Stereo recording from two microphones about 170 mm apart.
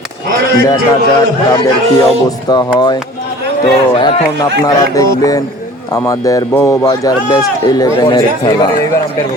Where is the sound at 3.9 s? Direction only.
30° left (ahead or behind).